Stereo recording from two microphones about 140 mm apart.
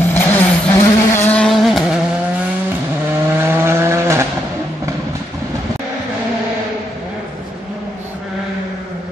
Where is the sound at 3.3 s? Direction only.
15° right (ahead or behind).